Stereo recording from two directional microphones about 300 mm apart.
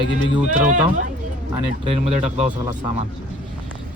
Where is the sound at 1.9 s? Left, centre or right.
Right.